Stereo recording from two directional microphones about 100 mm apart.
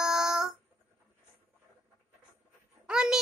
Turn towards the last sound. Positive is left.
turn(degrees=-10)  # may be behind; listen again after turning